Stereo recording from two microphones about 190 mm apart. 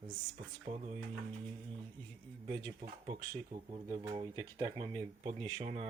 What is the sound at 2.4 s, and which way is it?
Speech, 30° right (ahead or behind).